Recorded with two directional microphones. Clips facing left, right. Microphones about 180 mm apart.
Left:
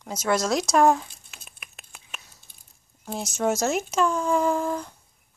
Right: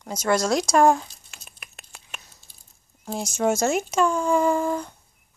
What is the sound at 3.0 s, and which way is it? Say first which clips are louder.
Speech: right 2 dB; centre (ahead or behind).